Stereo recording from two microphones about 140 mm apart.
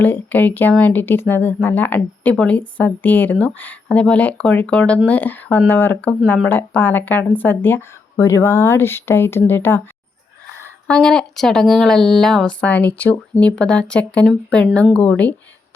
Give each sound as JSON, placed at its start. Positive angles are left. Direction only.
{"t": 0.0, "sound": "speech", "side_deg": 10}
{"t": 10.8, "sound": "speech", "side_deg": 5}